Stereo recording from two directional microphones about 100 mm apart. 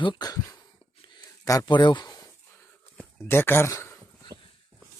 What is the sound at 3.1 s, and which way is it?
Speech, 25° left (ahead or behind).